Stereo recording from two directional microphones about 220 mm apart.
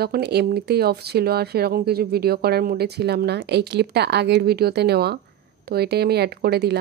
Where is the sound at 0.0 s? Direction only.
45° right (ahead or behind).